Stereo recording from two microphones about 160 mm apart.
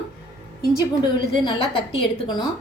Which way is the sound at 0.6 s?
25° left (ahead or behind).